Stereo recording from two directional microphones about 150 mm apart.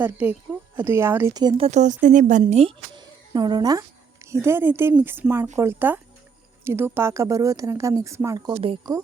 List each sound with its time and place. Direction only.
0.0 s speech: 10° right (ahead or behind); by 1.6 s 30° right (ahead or behind)
1.6 s speech: 50° right (ahead or behind)
2.4 s speech: 40° right (ahead or behind)
2.9 s speech: 30° right (ahead or behind)